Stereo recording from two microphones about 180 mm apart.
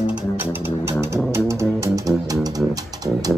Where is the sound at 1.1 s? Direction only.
15° right (ahead or behind).